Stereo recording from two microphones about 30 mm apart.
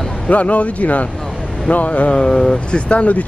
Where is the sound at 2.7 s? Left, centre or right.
Left.